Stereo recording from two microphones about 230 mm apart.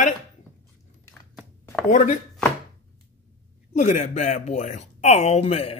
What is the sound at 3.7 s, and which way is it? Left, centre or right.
Speech, left.